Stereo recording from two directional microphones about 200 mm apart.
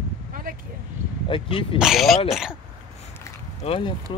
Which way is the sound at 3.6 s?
25° left (ahead or behind).